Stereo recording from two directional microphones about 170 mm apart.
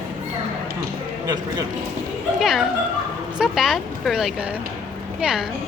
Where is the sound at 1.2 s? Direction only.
20° right (ahead or behind).